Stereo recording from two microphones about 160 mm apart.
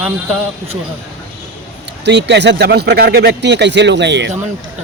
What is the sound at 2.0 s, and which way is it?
A man's voice, 90° right.